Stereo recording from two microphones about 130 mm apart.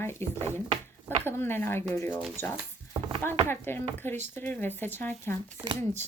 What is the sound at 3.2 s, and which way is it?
Speech, 15° left (ahead or behind).